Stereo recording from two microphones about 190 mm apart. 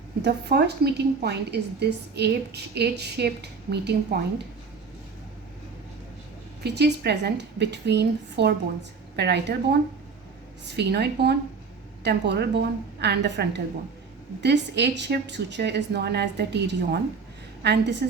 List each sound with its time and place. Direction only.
0.2 s a woman's voice: 60° right (ahead or behind)
6.6 s a woman's voice: 60° right (ahead or behind)
10.8 s a woman's voice: 60° right (ahead or behind)